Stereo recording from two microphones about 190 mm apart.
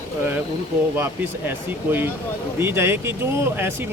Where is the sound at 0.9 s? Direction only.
10° right (ahead or behind).